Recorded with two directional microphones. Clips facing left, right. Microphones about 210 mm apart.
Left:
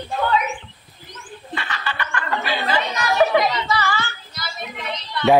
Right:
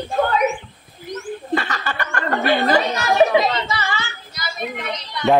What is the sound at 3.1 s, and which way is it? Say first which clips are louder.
Speech: right 2 dB; 25° right (ahead or behind).